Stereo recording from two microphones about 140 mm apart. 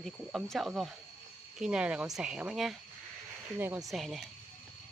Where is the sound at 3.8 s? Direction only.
Centre (ahead or behind).